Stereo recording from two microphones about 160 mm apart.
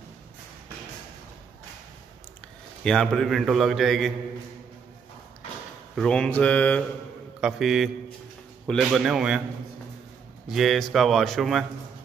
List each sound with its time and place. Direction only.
2.8 s a man's voice: 5° left (ahead or behind)
5.9 s mantra: 5° left (ahead or behind)
7.3 s a man's voice: 5° right (ahead or behind)
10.5 s a man's voice: centre (ahead or behind)